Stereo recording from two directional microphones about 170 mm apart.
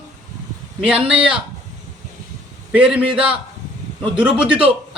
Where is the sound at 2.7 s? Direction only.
5° right (ahead or behind).